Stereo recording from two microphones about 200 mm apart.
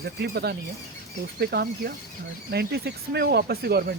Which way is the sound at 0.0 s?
55° right (ahead or behind).